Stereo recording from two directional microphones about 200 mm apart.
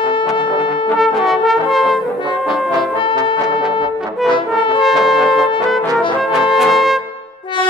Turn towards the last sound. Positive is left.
turn(degrees=0)  # may be behind; listen again after turning